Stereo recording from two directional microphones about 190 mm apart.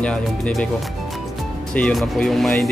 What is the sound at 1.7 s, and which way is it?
Speech, 5° left (ahead or behind).